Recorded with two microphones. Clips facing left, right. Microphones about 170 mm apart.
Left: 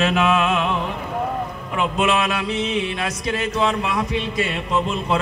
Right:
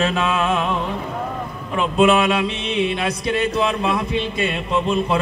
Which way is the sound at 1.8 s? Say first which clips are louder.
Right 5 dB; 30° right (ahead or behind).